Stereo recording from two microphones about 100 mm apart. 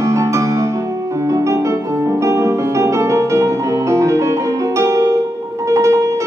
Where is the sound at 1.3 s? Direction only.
35° right (ahead or behind).